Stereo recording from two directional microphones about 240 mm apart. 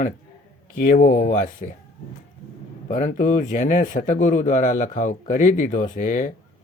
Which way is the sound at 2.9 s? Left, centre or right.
Left.